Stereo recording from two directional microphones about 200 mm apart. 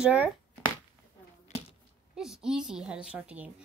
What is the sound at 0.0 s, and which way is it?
Speech, 5° right (ahead or behind).